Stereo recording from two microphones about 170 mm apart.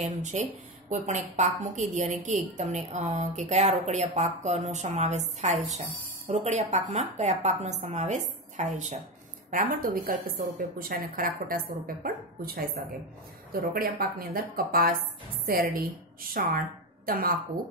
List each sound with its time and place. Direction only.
0.0 s a woman's voice: 45° right (ahead or behind); by 17.3 s 60° right (ahead or behind)